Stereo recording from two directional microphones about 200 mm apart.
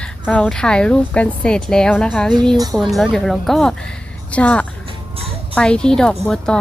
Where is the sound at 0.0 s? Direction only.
5° left (ahead or behind).